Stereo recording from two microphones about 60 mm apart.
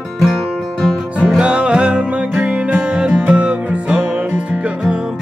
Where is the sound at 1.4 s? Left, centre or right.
Centre.